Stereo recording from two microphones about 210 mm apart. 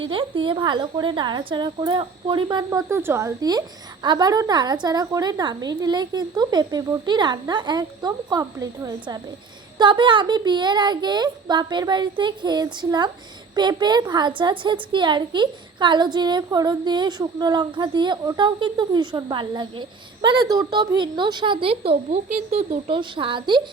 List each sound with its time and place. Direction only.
0.0 s a woman's voice: 25° right (ahead or behind)
22.3 s speech: 40° right (ahead or behind)
22.9 s a woman's voice: 25° right (ahead or behind)